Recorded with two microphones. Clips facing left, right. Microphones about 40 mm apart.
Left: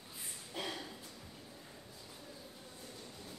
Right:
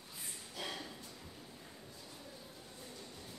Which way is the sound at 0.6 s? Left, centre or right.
Centre.